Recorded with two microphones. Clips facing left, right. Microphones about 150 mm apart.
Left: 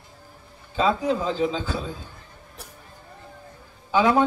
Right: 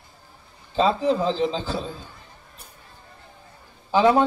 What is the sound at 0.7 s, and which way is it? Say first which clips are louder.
A man's voice: right 2 dB; 30° right (ahead or behind).